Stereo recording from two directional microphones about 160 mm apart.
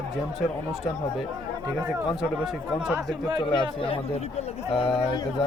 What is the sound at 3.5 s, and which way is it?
Speech, 30° left (ahead or behind).